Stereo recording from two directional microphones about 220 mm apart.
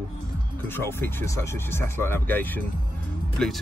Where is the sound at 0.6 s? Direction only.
10° left (ahead or behind).